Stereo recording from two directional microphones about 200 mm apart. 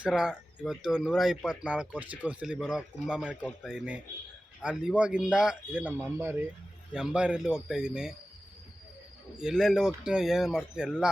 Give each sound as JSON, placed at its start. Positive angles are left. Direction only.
{"t": 0.0, "sound": "speech", "side_deg": -5}
{"t": 9.4, "sound": "speech", "side_deg": -5}